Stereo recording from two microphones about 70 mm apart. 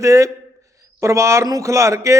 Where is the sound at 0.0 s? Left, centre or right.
Right.